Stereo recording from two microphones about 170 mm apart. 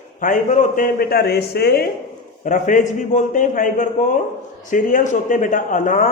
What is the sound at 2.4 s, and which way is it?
A man's voice, 50° left (ahead or behind).